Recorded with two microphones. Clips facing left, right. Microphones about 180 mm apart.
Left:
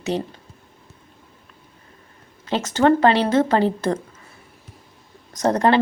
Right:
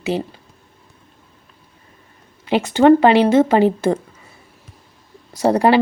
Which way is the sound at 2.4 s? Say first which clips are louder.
Right 5 dB; 15° right (ahead or behind).